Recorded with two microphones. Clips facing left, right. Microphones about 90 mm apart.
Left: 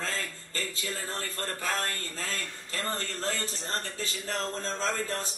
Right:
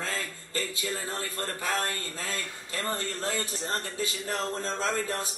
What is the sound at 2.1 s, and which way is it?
A man's voice, 10° right (ahead or behind).